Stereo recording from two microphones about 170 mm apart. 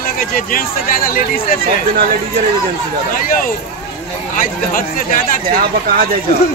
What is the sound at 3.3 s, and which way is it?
Speech, 55° left (ahead or behind).